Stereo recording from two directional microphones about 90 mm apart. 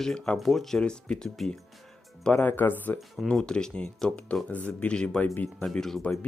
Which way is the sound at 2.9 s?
Centre (ahead or behind).